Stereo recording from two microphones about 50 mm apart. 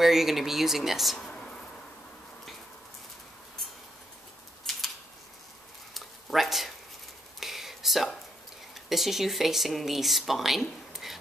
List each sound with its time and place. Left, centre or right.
0.0 s speech: centre
4.7 s scissors: centre
5.9 s a sound: centre
8.7 s speech: centre